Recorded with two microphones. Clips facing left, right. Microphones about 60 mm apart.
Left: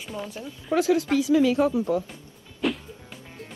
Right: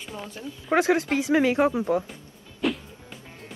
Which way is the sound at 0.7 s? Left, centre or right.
Right.